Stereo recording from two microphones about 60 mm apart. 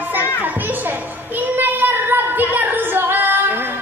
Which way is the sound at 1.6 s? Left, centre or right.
Right.